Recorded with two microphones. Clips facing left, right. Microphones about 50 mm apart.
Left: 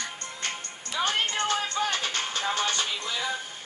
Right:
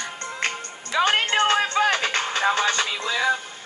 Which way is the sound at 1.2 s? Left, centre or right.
Right.